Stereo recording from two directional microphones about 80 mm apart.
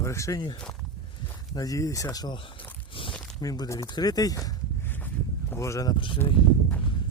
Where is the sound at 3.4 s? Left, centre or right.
Left.